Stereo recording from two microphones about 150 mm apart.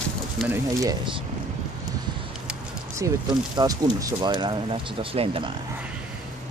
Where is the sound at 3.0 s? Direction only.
20° right (ahead or behind); by 5.5 s 40° right (ahead or behind).